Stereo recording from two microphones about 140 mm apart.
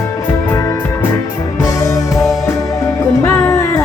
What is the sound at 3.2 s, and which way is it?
Music, 20° left (ahead or behind).